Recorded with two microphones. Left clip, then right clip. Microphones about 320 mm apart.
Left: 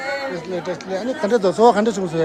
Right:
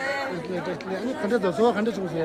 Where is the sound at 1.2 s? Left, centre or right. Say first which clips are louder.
Left 8 dB; centre.